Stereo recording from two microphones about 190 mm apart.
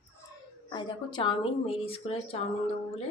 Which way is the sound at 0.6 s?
25° left (ahead or behind).